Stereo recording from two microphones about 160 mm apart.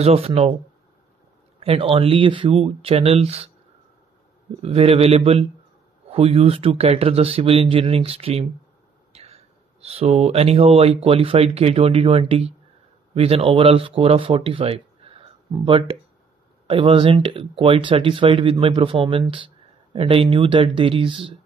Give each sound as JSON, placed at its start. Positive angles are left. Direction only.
{"t": 0.0, "sound": "speech", "side_deg": -40}
{"t": 1.6, "sound": "speech", "side_deg": -35}
{"t": 4.6, "sound": "speech", "side_deg": -40}